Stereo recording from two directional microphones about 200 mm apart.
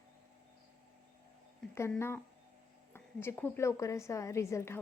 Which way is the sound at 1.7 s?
15° left (ahead or behind).